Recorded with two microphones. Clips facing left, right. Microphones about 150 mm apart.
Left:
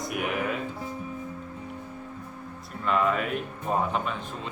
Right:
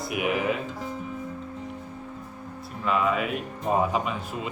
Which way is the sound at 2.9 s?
5° right (ahead or behind).